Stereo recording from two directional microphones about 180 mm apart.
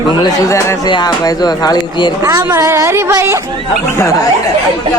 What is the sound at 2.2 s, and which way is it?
A woman's voice, 15° right (ahead or behind).